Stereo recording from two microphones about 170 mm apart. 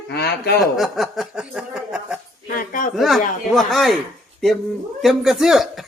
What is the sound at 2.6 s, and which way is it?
Speech, 55° left (ahead or behind).